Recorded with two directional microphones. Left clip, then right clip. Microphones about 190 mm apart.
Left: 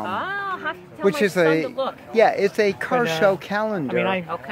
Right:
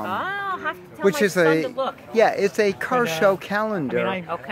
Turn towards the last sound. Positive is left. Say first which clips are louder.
# even
turn(degrees=-5)  # may be behind; listen again after turning